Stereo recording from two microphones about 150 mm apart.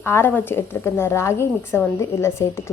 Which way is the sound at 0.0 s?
15° left (ahead or behind).